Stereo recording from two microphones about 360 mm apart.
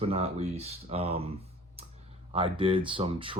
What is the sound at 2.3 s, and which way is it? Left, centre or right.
Speech, centre.